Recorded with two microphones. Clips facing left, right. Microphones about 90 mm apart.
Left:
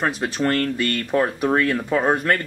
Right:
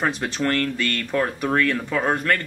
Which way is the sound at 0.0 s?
5° left (ahead or behind).